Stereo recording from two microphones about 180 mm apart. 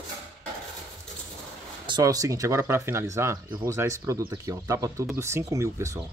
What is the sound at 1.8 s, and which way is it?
Speech, 25° right (ahead or behind).